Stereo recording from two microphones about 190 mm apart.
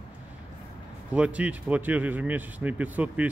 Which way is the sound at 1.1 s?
5° right (ahead or behind).